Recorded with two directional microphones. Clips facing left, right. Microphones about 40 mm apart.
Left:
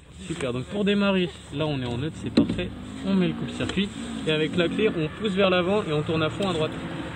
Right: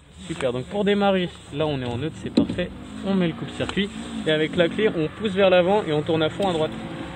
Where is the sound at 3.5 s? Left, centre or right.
Right.